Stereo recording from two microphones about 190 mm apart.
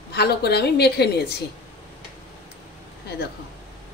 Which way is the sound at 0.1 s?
60° left (ahead or behind).